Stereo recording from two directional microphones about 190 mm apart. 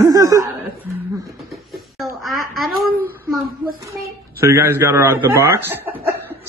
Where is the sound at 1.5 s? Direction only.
Centre (ahead or behind).